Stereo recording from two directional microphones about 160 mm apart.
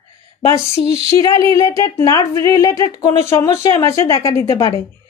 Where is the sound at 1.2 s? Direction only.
20° left (ahead or behind).